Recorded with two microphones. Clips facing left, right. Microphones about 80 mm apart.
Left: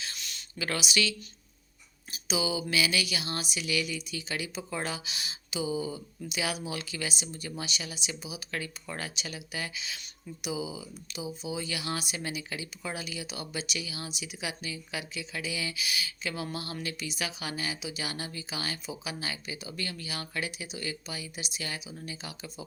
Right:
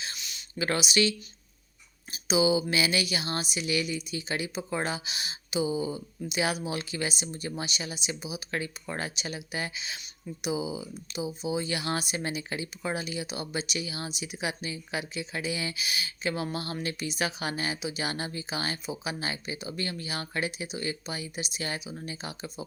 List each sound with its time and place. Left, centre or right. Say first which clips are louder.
0.2 s a sound: even; centre
0.6 s speech: right 4 dB; right
2.1 s speech: right 7 dB; right